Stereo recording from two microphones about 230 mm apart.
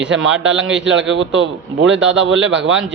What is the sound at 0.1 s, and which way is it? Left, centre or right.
A man's voice, right.